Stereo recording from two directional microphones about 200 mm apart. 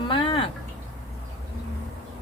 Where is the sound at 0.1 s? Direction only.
25° left (ahead or behind).